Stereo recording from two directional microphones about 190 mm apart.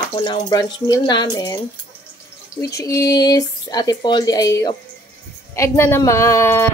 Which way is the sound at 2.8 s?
20° left (ahead or behind).